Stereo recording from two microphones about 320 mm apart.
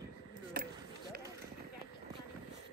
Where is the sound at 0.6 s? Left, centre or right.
Right.